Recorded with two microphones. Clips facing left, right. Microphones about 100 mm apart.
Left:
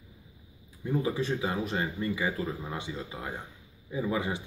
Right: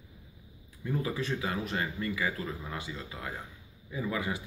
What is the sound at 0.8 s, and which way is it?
A man's voice, 20° left (ahead or behind).